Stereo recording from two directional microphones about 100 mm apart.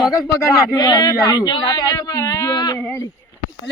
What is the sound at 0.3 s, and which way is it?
Speech, 40° left (ahead or behind).